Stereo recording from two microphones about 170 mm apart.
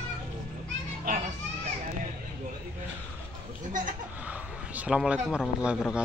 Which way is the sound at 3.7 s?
50° right (ahead or behind).